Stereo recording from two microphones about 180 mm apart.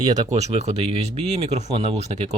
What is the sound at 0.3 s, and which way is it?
Speech, 35° right (ahead or behind).